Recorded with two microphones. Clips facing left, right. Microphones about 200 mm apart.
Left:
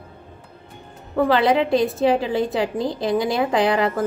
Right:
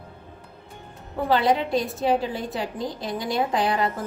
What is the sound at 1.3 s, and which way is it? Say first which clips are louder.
A woman's voice: left 2 dB; 90° left.